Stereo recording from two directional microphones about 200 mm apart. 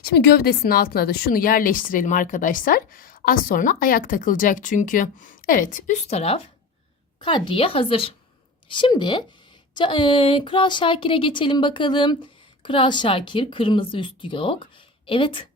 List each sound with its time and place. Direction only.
0.0 s a woman's voice: 50° left (ahead or behind); by 15.4 s 25° left (ahead or behind)